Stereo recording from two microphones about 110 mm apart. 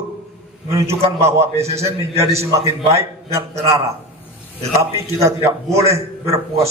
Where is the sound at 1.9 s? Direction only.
25° right (ahead or behind).